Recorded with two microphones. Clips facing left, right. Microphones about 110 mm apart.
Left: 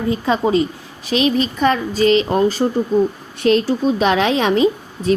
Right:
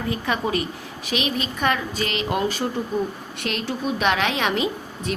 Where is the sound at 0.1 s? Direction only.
25° left (ahead or behind).